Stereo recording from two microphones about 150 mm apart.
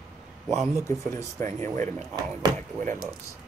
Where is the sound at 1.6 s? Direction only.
50° right (ahead or behind).